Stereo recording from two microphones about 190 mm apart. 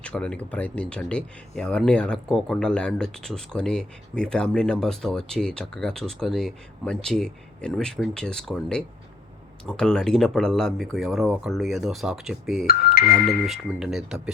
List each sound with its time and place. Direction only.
0.0 s speech: 5° left (ahead or behind)
12.6 s speech: 50° left (ahead or behind)
13.4 s speech: 5° right (ahead or behind)